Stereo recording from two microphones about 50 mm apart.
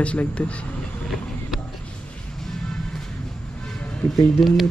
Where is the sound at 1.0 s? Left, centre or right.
Centre.